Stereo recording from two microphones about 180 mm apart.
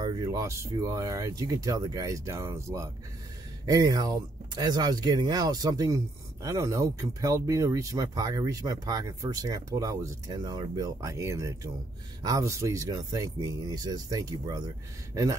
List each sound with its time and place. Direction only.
0.0 s speech: 20° right (ahead or behind)